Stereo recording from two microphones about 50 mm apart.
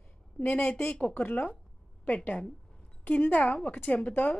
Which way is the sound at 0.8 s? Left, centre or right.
Left.